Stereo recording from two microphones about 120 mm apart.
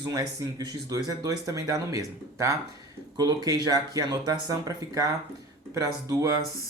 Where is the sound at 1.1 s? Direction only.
30° right (ahead or behind).